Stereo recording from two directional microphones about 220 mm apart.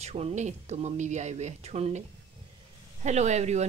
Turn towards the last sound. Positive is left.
turn(degrees=-30)  # may be behind; listen again after turning